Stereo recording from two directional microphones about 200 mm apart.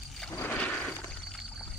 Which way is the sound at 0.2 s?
10° left (ahead or behind).